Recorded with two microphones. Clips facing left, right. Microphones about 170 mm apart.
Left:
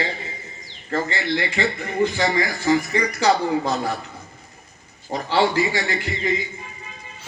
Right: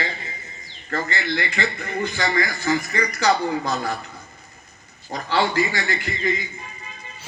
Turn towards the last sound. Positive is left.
turn(degrees=25)  # may be behind; listen again after turning